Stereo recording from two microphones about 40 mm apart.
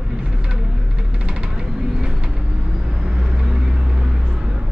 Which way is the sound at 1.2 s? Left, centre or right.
Right.